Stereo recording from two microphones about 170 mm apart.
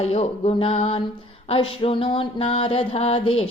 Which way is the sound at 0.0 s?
35° left (ahead or behind).